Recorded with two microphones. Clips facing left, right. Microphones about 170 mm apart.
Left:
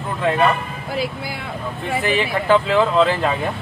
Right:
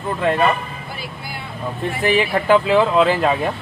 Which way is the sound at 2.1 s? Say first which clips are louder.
Right 2 dB; 10° right (ahead or behind).